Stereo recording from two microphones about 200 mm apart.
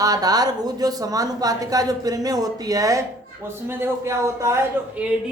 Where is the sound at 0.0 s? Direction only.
20° right (ahead or behind).